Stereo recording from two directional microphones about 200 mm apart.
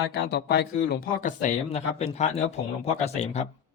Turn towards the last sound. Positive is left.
turn(degrees=30)  # may be behind; listen again after turning